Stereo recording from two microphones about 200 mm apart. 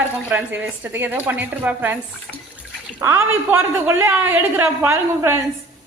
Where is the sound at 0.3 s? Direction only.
10° right (ahead or behind).